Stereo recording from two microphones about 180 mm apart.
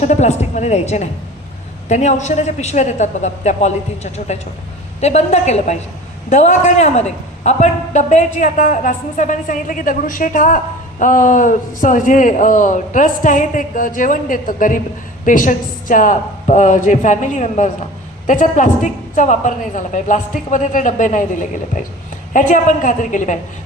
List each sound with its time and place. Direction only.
0.0 s a woman's voice: 40° left (ahead or behind)